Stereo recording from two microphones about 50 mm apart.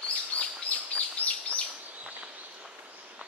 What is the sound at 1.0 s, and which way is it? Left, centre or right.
Chirp, left.